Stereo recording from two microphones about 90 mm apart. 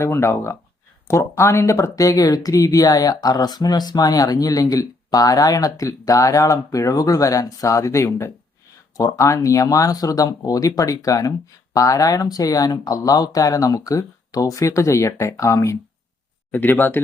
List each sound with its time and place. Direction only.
0.0 s speech: 30° left (ahead or behind)
16.5 s speech: 20° left (ahead or behind)